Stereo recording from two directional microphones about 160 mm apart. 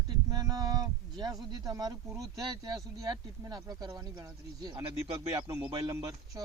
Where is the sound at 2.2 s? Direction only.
25° right (ahead or behind).